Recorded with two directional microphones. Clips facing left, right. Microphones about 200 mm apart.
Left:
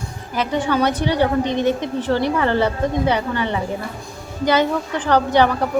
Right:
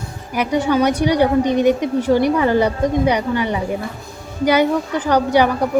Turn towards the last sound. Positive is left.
turn(degrees=-10)  # may be behind; listen again after turning